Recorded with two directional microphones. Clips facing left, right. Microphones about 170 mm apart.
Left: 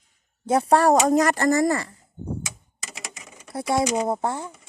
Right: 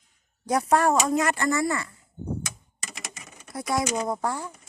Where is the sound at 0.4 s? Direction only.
30° left (ahead or behind).